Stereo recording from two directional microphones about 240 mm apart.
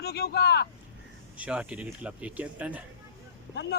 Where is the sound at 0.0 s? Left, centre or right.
Left.